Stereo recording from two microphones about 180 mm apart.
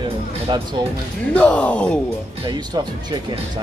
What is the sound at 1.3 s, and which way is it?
Speech, 5° left (ahead or behind).